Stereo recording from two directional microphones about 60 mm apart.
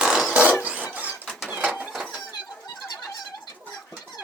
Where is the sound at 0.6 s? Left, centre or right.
Right.